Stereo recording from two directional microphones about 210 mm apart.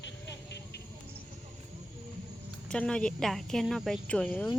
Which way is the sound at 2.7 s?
5° left (ahead or behind).